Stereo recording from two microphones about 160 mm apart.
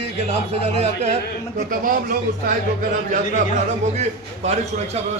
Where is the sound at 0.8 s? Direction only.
45° right (ahead or behind).